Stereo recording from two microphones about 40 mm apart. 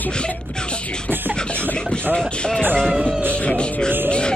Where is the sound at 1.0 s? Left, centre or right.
Right.